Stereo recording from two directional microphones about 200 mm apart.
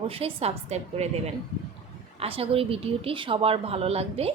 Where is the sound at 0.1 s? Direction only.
30° right (ahead or behind).